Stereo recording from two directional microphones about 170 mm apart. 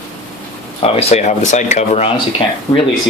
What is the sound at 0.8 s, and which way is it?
Speech, 40° left (ahead or behind).